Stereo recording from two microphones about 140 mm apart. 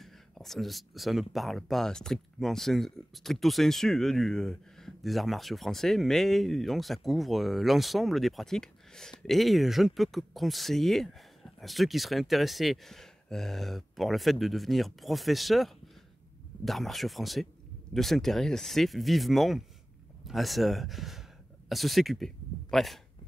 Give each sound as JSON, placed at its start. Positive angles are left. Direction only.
{"t": 0.0, "sound": "speech", "side_deg": 0}